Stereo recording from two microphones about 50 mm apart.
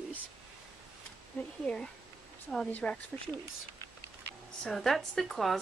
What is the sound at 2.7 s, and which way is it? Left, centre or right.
Speech, left.